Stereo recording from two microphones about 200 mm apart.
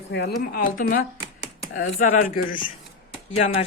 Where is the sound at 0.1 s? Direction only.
55° left (ahead or behind).